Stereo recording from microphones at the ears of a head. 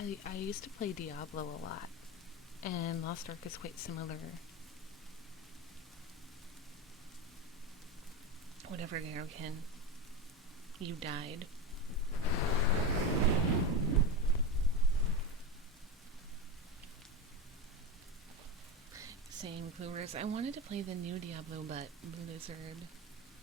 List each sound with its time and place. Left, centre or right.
0.0 s speech: left
8.6 s speech: right
10.8 s speech: right
11.9 s thunder: left
13.1 s waves: right
18.9 s speech: right